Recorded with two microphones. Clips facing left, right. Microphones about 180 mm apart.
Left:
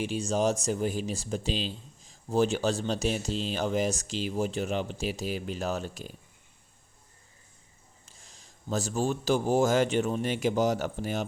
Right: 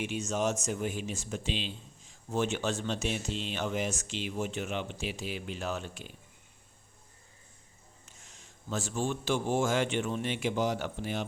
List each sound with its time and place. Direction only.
0.0 s speech: 35° left (ahead or behind)
8.0 s a man's voice: 35° left (ahead or behind)